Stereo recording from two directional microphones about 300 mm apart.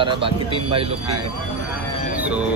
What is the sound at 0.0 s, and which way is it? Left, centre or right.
Speech, centre.